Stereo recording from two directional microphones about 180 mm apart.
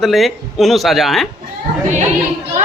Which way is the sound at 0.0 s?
Centre (ahead or behind).